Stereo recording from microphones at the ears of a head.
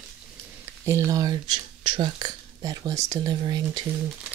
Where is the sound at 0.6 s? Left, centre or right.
Right.